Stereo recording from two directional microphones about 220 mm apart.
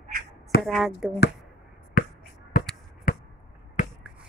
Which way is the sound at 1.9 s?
40° left (ahead or behind).